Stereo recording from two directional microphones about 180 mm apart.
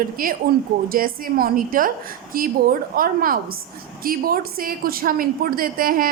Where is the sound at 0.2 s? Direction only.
55° right (ahead or behind).